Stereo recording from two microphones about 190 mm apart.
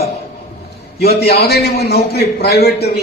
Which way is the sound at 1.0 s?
55° left (ahead or behind).